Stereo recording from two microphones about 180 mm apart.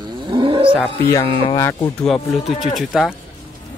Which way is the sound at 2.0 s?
Centre (ahead or behind).